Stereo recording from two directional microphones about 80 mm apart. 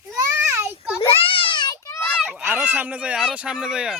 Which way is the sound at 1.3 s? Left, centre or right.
Left.